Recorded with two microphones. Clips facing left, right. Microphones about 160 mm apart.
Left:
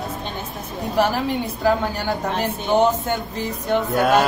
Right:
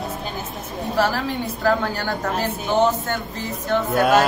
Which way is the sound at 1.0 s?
15° left (ahead or behind).